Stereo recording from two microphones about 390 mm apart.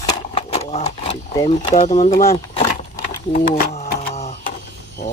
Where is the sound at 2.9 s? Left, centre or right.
Centre.